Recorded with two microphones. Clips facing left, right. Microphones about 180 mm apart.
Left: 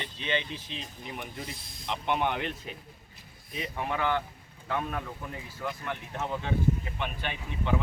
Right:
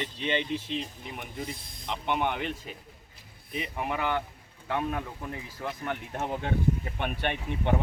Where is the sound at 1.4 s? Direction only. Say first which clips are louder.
Right 4 dB; 55° right (ahead or behind).